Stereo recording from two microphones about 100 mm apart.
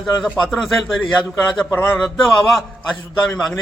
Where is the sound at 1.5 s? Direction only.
20° left (ahead or behind).